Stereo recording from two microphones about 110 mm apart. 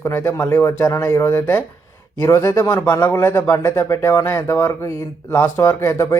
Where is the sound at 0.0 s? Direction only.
25° left (ahead or behind).